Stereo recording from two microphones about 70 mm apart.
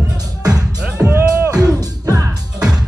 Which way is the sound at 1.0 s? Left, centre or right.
Right.